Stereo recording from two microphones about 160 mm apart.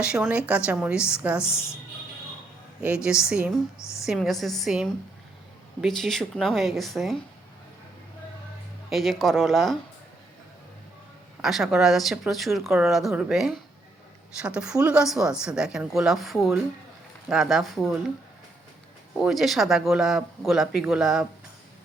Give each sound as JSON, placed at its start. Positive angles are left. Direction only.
{"t": 0.0, "sound": "a woman's voice", "side_deg": -5}
{"t": 1.4, "sound": "speech", "side_deg": 15}
{"t": 2.8, "sound": "speech", "side_deg": -5}
{"t": 3.8, "sound": "speech", "side_deg": 20}
{"t": 4.0, "sound": "speech", "side_deg": 0}
{"t": 8.9, "sound": "speech", "side_deg": 0}
{"t": 11.4, "sound": "speech", "side_deg": 0}
{"t": 19.2, "sound": "speech", "side_deg": 0}